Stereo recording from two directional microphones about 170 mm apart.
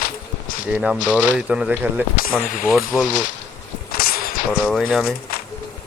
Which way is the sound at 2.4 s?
55° left (ahead or behind).